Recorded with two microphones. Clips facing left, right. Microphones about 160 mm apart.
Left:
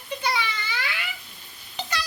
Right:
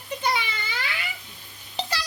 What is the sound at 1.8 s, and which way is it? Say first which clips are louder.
Stir: right 1 dB; 30° right (ahead or behind).